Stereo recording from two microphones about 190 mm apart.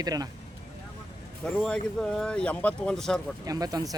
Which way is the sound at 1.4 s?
5° left (ahead or behind).